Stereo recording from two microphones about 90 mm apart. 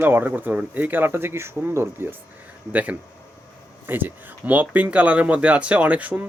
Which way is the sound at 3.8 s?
20° right (ahead or behind).